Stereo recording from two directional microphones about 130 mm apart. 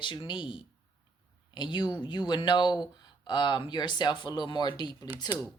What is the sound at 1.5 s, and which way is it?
Speech, 35° left (ahead or behind).